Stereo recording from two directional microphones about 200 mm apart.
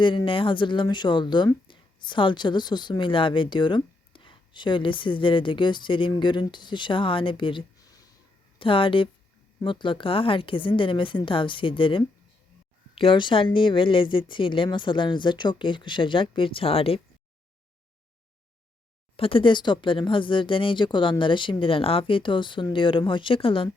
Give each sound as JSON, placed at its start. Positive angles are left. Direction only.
{"t": 0.3, "sound": "speech", "side_deg": 25}
{"t": 19.1, "sound": "speech", "side_deg": 25}